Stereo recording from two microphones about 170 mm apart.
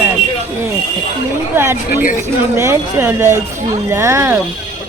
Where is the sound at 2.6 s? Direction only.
15° right (ahead or behind).